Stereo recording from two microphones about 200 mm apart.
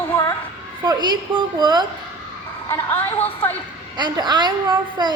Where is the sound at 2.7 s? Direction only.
10° left (ahead or behind).